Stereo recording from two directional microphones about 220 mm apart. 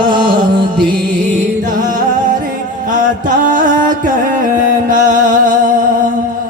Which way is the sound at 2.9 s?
35° right (ahead or behind).